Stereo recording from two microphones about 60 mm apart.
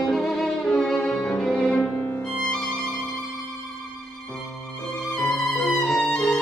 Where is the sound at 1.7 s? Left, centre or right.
Left.